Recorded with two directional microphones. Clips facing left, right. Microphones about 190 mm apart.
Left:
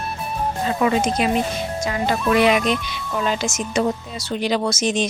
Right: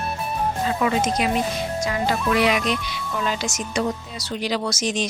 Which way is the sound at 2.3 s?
25° left (ahead or behind).